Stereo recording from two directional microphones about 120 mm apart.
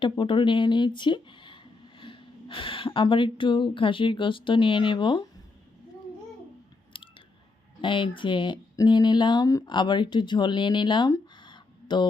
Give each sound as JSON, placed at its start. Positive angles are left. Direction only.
{"t": 0.0, "sound": "speech", "side_deg": 45}
{"t": 6.9, "sound": "chewing", "side_deg": 45}
{"t": 7.8, "sound": "speech", "side_deg": 40}
{"t": 11.3, "sound": "a sound", "side_deg": 40}